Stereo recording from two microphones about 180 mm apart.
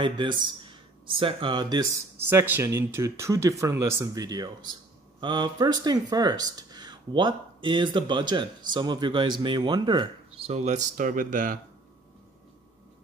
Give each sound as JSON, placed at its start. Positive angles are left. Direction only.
{"t": 0.0, "sound": "speech", "side_deg": -25}